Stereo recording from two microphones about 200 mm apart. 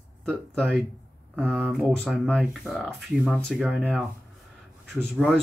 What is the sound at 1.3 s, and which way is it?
Speech, 10° right (ahead or behind).